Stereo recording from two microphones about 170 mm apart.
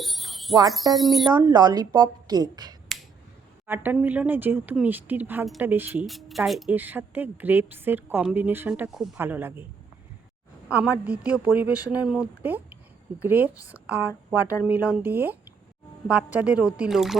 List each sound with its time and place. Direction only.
0.0 s a sound: centre (ahead or behind)
0.9 s a woman's voice: centre (ahead or behind)
1.3 s a woman's voice: 20° right (ahead or behind)
3.7 s a woman's voice: 10° right (ahead or behind)
6.1 s a woman's voice: centre (ahead or behind)
10.7 s a woman's voice: 10° right (ahead or behind)